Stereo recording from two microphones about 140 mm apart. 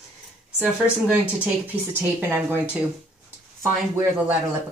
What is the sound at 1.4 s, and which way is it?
Speech, 10° right (ahead or behind).